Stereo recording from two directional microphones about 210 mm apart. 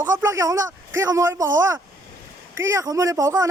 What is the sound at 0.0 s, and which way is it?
A man's voice, 15° right (ahead or behind).